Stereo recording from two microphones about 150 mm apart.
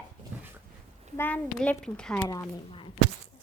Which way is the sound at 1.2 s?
10° left (ahead or behind).